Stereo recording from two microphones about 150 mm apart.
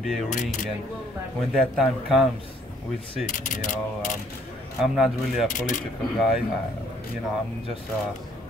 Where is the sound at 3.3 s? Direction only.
55° left (ahead or behind).